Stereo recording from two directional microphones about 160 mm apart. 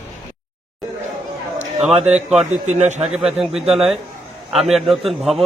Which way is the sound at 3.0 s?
5° right (ahead or behind).